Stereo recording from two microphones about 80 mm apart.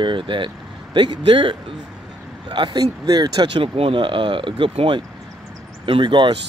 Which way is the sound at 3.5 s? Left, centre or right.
Right.